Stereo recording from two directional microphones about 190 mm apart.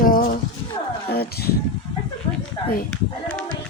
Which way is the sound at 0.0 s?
50° left (ahead or behind).